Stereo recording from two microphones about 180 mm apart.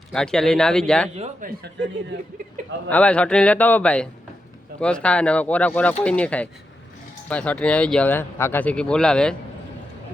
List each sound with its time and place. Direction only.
0.1 s speech: 5° left (ahead or behind)
1.1 s speech: 35° right (ahead or behind)
2.9 s speech: 5° left (ahead or behind)